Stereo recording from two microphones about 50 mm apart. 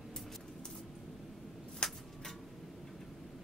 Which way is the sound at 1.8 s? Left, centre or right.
Centre.